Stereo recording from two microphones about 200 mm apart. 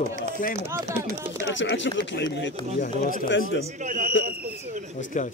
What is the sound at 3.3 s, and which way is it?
Speech, 70° left (ahead or behind).